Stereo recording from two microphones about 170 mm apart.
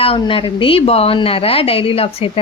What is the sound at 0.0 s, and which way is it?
Speech, 30° left (ahead or behind).